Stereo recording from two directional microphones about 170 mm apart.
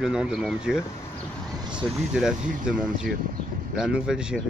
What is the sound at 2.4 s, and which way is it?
Speech, 50° right (ahead or behind).